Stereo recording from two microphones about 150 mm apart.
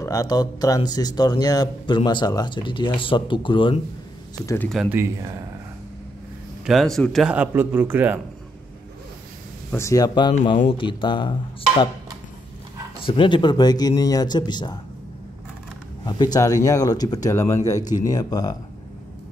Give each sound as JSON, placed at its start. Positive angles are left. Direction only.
{"t": 0.0, "sound": "speech", "side_deg": 25}
{"t": 4.8, "sound": "a man's voice", "side_deg": 0}
{"t": 6.6, "sound": "a man's voice", "side_deg": 0}
{"t": 7.3, "sound": "speech", "side_deg": -15}
{"t": 9.7, "sound": "speech", "side_deg": 20}
{"t": 13.0, "sound": "speech", "side_deg": 35}
{"t": 16.1, "sound": "speech", "side_deg": 25}